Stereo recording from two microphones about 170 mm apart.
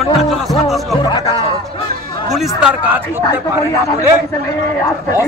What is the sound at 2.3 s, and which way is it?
Speech, 5° right (ahead or behind).